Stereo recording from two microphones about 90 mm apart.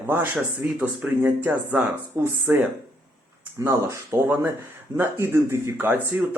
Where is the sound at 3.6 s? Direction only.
30° right (ahead or behind).